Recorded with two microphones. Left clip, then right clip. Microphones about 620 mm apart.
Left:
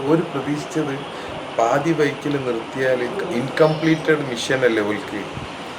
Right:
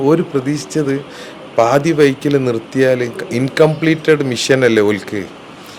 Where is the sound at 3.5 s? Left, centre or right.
Right.